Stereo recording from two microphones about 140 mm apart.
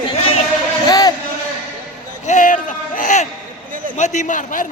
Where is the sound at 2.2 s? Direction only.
65° left (ahead or behind).